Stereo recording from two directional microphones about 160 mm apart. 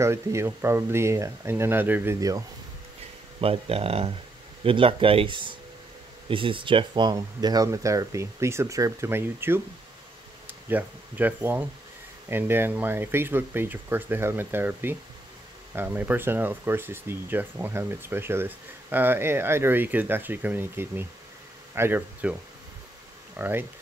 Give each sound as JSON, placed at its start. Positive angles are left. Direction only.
{"t": 0.0, "sound": "speech", "side_deg": -15}
{"t": 3.3, "sound": "speech", "side_deg": -35}
{"t": 10.7, "sound": "speech", "side_deg": -10}